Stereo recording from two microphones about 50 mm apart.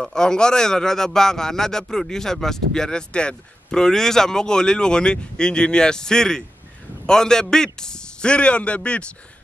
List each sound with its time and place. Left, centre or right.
0.0 s a man's voice: centre